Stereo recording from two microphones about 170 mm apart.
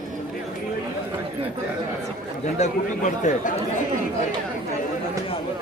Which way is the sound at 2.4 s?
45° left (ahead or behind).